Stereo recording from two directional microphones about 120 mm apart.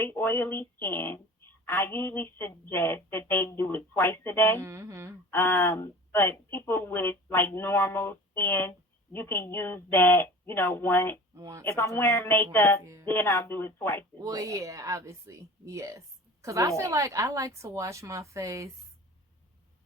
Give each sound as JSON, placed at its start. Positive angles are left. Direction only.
{"t": 0.0, "sound": "a woman's voice", "side_deg": 20}
{"t": 4.6, "sound": "speech", "side_deg": -25}
{"t": 5.3, "sound": "a woman's voice", "side_deg": 20}
{"t": 11.3, "sound": "speech", "side_deg": -30}
{"t": 11.6, "sound": "a woman's voice", "side_deg": 20}
{"t": 12.8, "sound": "speech", "side_deg": -25}
{"t": 13.1, "sound": "a woman's voice", "side_deg": 20}
{"t": 14.2, "sound": "speech", "side_deg": -30}